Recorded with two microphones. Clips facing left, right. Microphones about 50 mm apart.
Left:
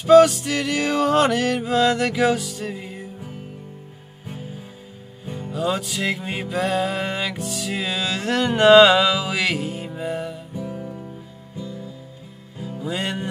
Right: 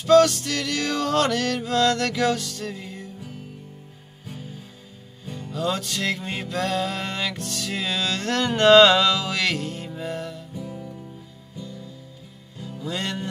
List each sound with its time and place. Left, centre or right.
0.0 s music: centre
10.5 s music: left